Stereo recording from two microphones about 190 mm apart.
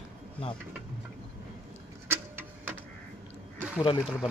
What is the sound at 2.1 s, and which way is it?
Printer, 10° right (ahead or behind).